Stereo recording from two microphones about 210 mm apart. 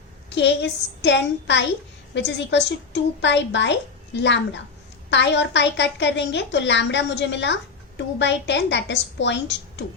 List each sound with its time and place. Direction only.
0.3 s a woman's voice: 55° left (ahead or behind)